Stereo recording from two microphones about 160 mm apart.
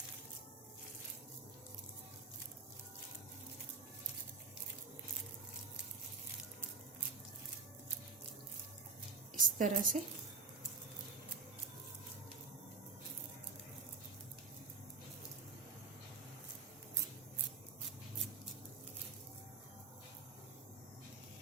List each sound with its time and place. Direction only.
9.3 s a woman's voice: 55° right (ahead or behind)